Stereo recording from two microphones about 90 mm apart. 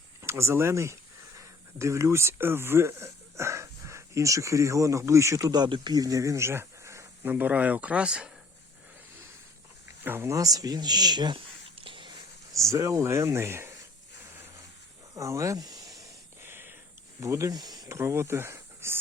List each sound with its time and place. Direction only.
0.2 s speech: 30° right (ahead or behind)
5.5 s speech: 55° right (ahead or behind); by 7.1 s 35° right (ahead or behind)
7.3 s speech: 20° right (ahead or behind)
10.0 s speech: 25° right (ahead or behind)
10.3 s speech: 40° right (ahead or behind); by 12.1 s 70° right (ahead or behind)
12.5 s speech: 35° right (ahead or behind)
15.1 s a sound: 35° right (ahead or behind)
16.4 s a sound: 25° right (ahead or behind)
17.2 s speech: 35° right (ahead or behind)
17.9 s speech: 30° right (ahead or behind)